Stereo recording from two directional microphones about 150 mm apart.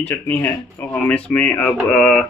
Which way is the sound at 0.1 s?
15° left (ahead or behind).